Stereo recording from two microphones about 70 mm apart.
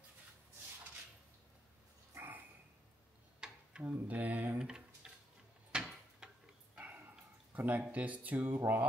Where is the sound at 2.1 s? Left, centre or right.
Right.